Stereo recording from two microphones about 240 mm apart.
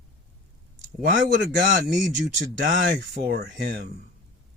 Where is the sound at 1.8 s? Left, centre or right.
Right.